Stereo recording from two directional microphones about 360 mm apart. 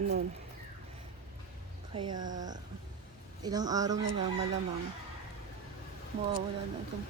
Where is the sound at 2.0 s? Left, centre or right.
Right.